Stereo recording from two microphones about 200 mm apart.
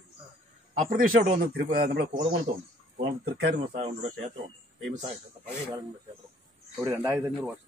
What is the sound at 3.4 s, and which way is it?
Speech, 50° right (ahead or behind).